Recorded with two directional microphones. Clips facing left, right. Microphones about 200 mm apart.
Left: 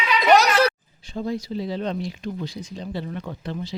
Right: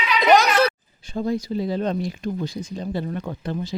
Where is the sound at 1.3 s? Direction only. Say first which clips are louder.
Right 3 dB; 45° right (ahead or behind).